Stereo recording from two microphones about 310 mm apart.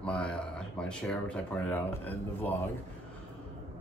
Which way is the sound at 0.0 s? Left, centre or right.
Centre.